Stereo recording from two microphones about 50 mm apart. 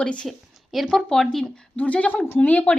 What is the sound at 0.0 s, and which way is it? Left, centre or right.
Speech, left.